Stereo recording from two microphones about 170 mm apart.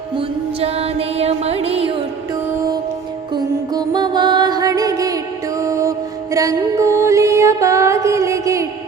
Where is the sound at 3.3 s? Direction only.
25° right (ahead or behind).